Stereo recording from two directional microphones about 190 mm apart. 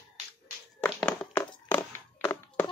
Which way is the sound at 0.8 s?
10° left (ahead or behind).